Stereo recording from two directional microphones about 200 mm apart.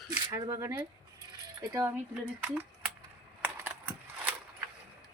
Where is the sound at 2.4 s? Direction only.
5° right (ahead or behind).